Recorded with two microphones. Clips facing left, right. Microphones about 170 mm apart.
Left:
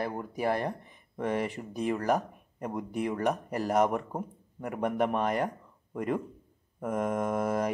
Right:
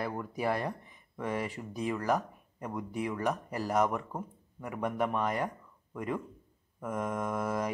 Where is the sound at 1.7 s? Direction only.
55° left (ahead or behind).